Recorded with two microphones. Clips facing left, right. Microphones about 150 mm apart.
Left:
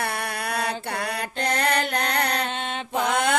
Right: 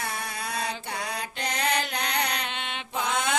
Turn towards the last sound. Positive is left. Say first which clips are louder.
# left 5 dB
turn(degrees=55)  # may be behind; listen again after turning